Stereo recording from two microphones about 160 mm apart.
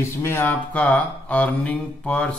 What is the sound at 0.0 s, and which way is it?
Speech, 15° left (ahead or behind).